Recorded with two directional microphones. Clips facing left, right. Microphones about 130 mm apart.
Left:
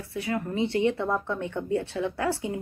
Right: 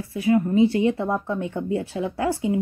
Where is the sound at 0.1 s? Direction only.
20° right (ahead or behind).